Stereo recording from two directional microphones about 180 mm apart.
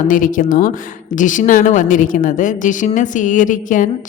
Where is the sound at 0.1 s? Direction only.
45° left (ahead or behind).